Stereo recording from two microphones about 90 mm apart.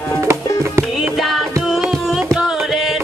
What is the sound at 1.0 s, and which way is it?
Music, centre (ahead or behind).